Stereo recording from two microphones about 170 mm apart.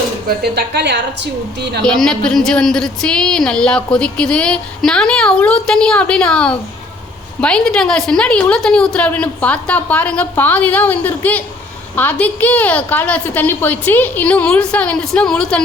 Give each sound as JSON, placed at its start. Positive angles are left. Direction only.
{"t": 0.3, "sound": "a woman's voice", "side_deg": -75}
{"t": 1.8, "sound": "a woman's voice", "side_deg": 5}